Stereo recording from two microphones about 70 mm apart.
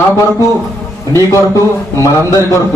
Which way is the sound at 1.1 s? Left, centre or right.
Left.